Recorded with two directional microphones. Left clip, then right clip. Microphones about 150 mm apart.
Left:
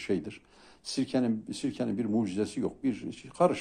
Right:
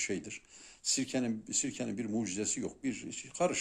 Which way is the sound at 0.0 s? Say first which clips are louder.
Left 5 dB; 5° right (ahead or behind).